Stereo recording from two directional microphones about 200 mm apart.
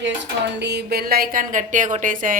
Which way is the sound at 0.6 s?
55° right (ahead or behind).